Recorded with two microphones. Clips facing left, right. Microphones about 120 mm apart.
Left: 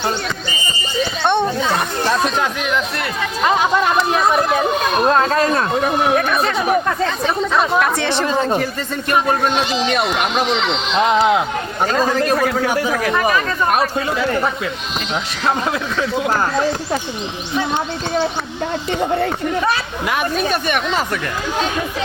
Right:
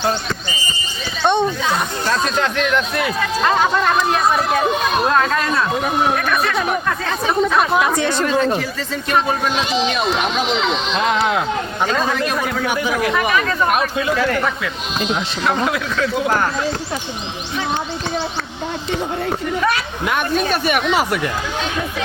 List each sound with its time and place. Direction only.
2.0 s speech: 15° left (ahead or behind)
5.1 s speech: 35° left (ahead or behind)
7.5 s speech: 5° right (ahead or behind)
7.9 s speech: 70° left (ahead or behind)
8.3 s speech: 25° left (ahead or behind)
11.9 s speech: 40° left (ahead or behind)
14.2 s speech: 25° left (ahead or behind)
20.5 s speech: 5° right (ahead or behind)